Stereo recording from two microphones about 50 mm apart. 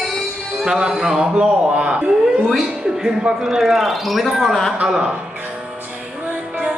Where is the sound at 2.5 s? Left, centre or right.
Centre.